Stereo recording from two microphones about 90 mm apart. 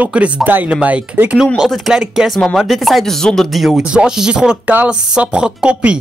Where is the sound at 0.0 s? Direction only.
15° right (ahead or behind).